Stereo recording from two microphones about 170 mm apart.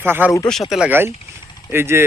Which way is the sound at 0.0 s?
10° right (ahead or behind).